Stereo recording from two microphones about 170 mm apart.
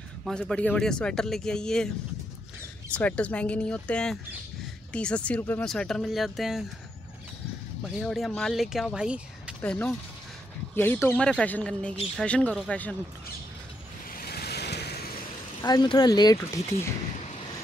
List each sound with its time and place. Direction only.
0.2 s speech: 5° left (ahead or behind)
2.9 s speech: 10° left (ahead or behind)
8.0 s speech: centre (ahead or behind)
9.6 s speech: 10° left (ahead or behind)
14.1 s vehicle: 65° left (ahead or behind)
15.6 s speech: 25° left (ahead or behind)